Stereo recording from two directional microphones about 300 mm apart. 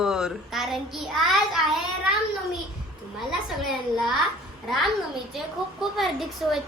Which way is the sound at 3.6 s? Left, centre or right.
Centre.